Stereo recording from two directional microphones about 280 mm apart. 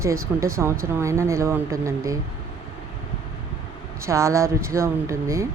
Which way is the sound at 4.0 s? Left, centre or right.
Centre.